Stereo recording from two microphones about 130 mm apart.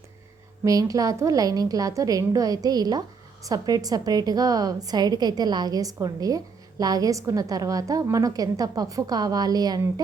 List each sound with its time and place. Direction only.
0.6 s a woman's voice: 25° right (ahead or behind)